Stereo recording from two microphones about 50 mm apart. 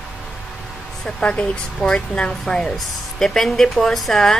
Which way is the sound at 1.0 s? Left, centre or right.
Left.